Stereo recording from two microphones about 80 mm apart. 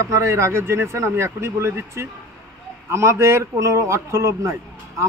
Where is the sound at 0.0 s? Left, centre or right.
Right.